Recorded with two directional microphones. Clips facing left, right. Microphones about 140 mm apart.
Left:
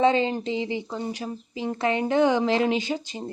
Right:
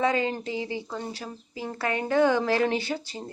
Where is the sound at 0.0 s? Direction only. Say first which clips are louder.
Left 4 dB; 25° left (ahead or behind).